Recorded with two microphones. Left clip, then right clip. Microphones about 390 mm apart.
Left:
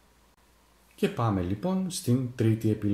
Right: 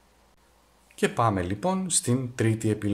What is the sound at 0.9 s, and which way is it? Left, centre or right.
Speech, centre.